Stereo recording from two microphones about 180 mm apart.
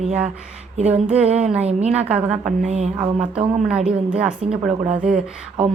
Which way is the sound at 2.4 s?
40° right (ahead or behind).